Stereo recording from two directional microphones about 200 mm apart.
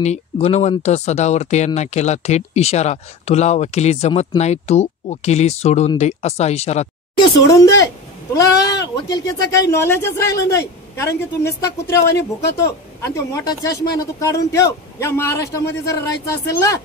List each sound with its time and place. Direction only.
0.0 s speech: 35° left (ahead or behind)
8.4 s speech: 15° left (ahead or behind)